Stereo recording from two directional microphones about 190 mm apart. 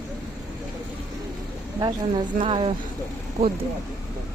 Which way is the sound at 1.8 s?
25° right (ahead or behind).